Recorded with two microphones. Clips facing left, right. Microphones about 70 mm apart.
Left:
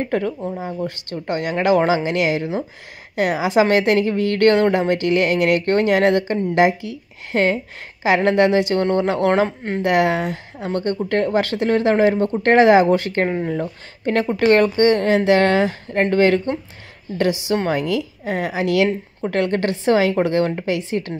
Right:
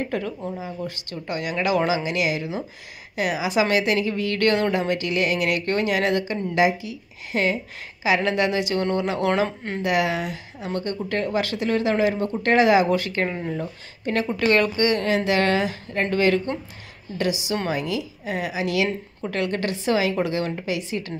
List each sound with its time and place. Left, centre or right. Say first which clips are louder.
0.1 s a woman's voice: left 6 dB; left
13.5 s speech: left 5 dB; left
14.4 s a woman's voice: left 6 dB; left